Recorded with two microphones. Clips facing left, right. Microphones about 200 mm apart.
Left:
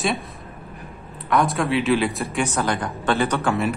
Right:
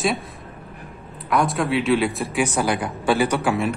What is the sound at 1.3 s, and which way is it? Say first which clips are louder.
A man's voice: even; centre (ahead or behind).